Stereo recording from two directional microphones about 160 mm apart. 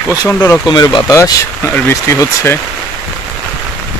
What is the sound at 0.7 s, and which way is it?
Speech, 25° left (ahead or behind).